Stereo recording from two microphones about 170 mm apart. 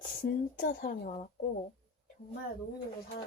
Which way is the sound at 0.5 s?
50° left (ahead or behind).